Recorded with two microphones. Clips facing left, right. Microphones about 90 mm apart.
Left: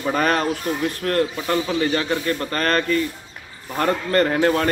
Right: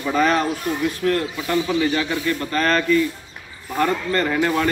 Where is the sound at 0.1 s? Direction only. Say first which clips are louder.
Right 2 dB; 50° left (ahead or behind).